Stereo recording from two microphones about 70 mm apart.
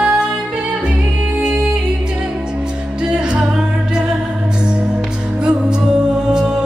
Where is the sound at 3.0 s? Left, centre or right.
Centre.